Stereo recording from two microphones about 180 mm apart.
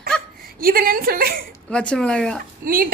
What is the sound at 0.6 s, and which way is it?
Speech, 55° right (ahead or behind).